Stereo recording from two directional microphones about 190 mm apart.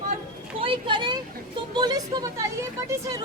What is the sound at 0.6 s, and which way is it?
Speech, 30° right (ahead or behind).